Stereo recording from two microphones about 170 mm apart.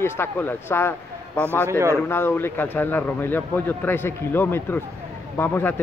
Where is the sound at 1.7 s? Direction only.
15° right (ahead or behind).